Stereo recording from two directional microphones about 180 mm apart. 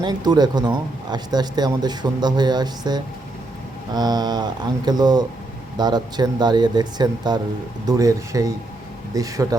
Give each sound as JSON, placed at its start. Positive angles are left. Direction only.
{"t": 0.0, "sound": "speech", "side_deg": -20}